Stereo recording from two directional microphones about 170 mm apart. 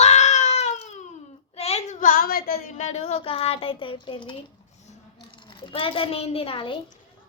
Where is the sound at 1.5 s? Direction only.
40° left (ahead or behind); by 2.6 s 60° left (ahead or behind).